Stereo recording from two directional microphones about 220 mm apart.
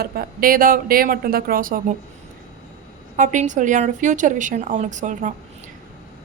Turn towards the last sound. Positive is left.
turn(degrees=-35)  # may be behind; listen again after turning